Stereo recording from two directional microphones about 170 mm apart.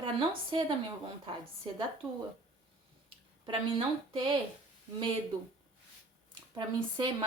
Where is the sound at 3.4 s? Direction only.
30° right (ahead or behind).